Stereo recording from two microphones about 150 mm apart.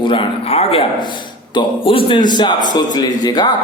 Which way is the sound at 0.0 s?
35° left (ahead or behind).